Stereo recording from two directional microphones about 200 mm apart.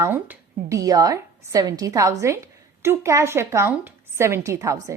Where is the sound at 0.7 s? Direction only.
15° right (ahead or behind).